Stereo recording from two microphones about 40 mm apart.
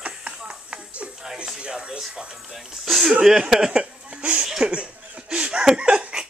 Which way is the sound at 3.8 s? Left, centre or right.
Right.